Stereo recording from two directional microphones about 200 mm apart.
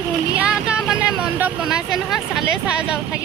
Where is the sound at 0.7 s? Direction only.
5° right (ahead or behind).